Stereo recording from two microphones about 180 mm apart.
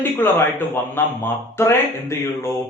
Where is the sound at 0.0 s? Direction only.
10° left (ahead or behind).